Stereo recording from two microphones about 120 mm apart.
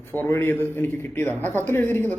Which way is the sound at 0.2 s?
20° left (ahead or behind).